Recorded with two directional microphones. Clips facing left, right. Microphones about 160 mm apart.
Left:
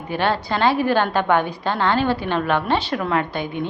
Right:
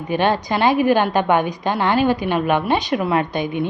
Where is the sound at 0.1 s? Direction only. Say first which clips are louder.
Right 3 dB; 20° right (ahead or behind).